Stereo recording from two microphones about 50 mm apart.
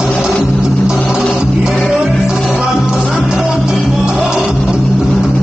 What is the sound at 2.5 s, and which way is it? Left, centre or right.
Music, centre.